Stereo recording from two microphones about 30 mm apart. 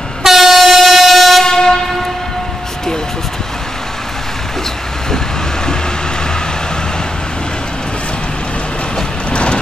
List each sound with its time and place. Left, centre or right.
0.2 s train: centre
1.4 s train: centre
9.3 s vehicle: left